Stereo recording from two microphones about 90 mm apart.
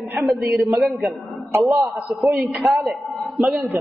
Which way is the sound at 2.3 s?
Centre (ahead or behind).